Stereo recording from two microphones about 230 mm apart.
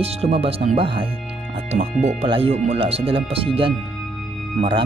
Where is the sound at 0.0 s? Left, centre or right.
Right.